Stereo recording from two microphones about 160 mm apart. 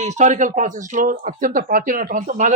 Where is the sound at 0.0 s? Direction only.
45° right (ahead or behind).